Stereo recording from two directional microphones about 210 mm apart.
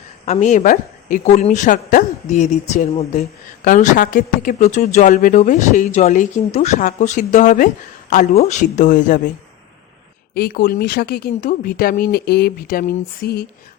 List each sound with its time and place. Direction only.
0.3 s a woman's voice: 35° left (ahead or behind)
10.3 s speech: 45° left (ahead or behind)